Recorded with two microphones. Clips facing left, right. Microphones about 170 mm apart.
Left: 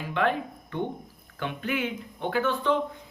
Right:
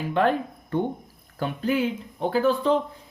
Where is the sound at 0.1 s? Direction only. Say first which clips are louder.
Right 4 dB; 40° right (ahead or behind).